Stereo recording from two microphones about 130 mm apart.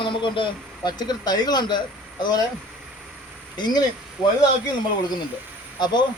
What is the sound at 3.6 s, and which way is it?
Speech, 30° left (ahead or behind).